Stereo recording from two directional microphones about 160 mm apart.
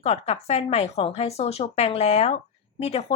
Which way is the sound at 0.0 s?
40° left (ahead or behind).